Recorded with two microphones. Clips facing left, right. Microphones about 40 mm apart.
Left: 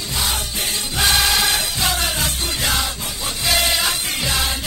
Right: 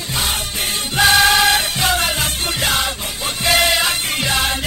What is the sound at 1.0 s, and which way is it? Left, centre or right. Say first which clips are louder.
Music: right 6 dB; right.